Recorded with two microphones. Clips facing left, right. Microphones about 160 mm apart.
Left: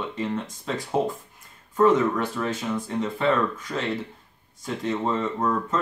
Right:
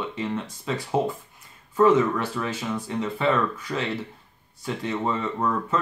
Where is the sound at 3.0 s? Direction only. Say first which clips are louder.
Even; 5° right (ahead or behind).